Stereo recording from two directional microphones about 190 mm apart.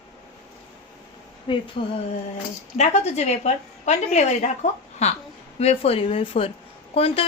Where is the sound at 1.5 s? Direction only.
25° left (ahead or behind).